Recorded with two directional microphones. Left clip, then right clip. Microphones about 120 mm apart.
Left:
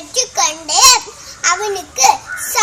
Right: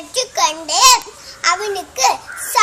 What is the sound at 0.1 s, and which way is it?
Babbling, 10° right (ahead or behind).